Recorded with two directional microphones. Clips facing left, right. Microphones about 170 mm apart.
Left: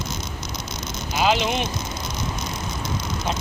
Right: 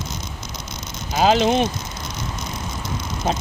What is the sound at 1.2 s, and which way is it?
Speech, 40° right (ahead or behind).